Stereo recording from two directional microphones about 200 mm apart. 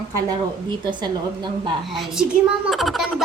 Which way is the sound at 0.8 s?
20° right (ahead or behind).